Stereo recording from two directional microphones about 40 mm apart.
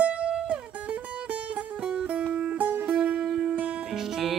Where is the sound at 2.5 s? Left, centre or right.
Right.